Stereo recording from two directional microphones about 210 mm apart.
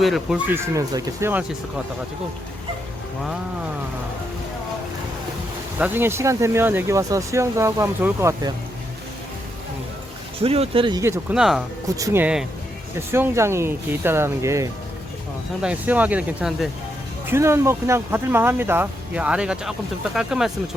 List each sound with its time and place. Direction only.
0.0 s speech: centre (ahead or behind)
5.8 s speech: 10° right (ahead or behind)
10.4 s speech: 30° right (ahead or behind)
11.3 s speech: centre (ahead or behind)
11.9 s speech: 15° right (ahead or behind)